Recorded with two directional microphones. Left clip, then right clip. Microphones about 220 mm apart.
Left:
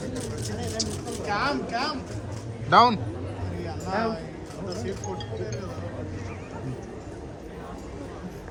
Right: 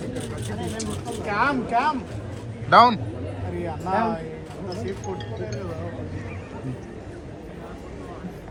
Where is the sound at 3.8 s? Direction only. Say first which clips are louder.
Right 4 dB; 30° right (ahead or behind).